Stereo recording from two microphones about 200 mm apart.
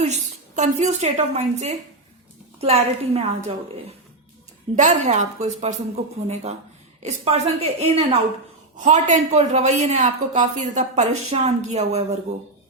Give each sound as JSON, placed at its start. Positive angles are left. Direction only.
{"t": 0.0, "sound": "a woman's voice", "side_deg": -35}
{"t": 4.7, "sound": "speech", "side_deg": -35}